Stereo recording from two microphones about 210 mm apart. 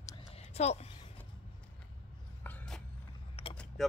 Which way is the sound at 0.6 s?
30° left (ahead or behind).